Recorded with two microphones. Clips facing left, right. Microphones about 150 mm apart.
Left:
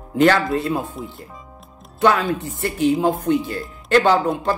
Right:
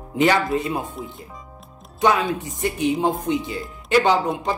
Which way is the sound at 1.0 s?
Centre (ahead or behind).